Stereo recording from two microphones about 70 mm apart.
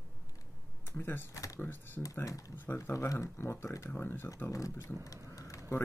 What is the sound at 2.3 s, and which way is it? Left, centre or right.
Speech, left.